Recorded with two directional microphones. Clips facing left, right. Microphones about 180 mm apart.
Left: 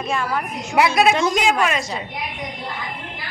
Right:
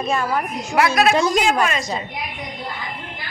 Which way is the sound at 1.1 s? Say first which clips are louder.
Right 1 dB; 40° right (ahead or behind).